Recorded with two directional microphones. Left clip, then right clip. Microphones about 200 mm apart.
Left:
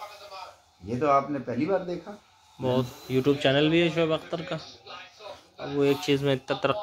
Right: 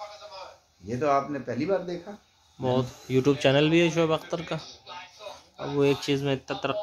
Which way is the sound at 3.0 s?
30° right (ahead or behind).